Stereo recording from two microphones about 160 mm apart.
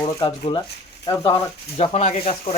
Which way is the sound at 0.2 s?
30° left (ahead or behind).